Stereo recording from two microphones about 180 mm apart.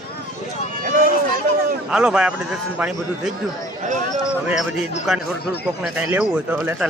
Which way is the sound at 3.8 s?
40° right (ahead or behind).